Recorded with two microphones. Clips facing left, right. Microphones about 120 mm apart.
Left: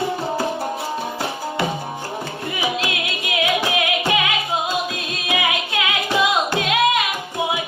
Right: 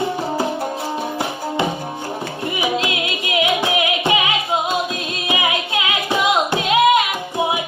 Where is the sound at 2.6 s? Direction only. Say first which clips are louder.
Right 3 dB; 25° right (ahead or behind).